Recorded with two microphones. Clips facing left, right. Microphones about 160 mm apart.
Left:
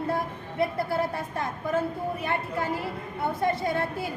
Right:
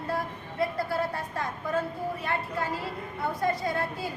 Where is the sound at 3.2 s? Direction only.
25° left (ahead or behind).